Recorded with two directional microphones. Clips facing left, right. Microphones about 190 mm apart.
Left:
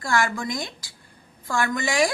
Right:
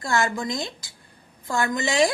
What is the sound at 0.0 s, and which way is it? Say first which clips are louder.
A woman's voice: even; 25° right (ahead or behind).